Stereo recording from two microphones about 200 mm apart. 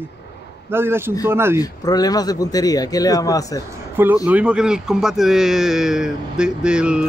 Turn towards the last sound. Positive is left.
turn(degrees=-5)  # may be behind; listen again after turning